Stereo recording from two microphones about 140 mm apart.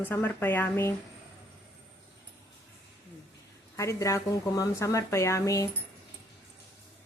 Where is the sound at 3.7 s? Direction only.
20° left (ahead or behind).